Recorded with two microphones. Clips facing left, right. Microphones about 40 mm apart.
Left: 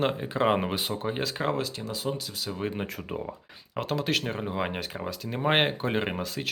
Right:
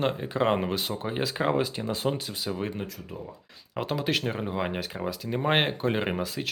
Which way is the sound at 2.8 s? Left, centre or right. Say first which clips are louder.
Left 3 dB; left.